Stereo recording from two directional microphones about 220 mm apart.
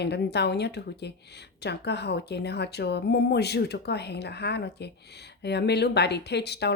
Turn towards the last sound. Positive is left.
turn(degrees=50)  # may be behind; listen again after turning